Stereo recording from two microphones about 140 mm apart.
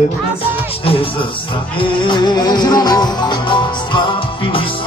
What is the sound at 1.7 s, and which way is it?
Music, 35° left (ahead or behind).